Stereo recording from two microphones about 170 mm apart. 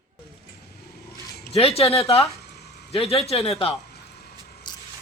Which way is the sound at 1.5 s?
35° left (ahead or behind).